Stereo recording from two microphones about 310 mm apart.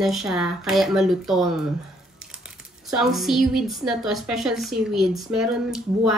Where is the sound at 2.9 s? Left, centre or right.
Centre.